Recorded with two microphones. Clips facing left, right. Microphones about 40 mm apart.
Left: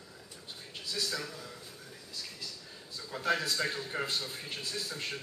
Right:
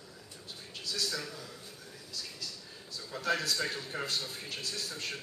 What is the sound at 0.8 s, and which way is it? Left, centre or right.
Speech, centre.